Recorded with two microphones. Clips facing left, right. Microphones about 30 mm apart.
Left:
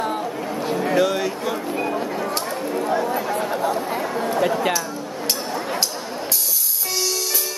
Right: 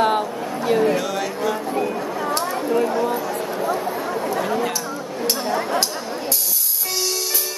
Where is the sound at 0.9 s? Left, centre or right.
Centre.